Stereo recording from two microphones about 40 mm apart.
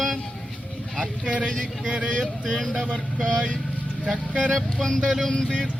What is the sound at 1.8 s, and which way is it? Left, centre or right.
Speech, right.